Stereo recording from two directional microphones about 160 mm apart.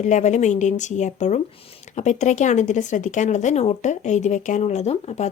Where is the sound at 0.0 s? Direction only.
45° left (ahead or behind).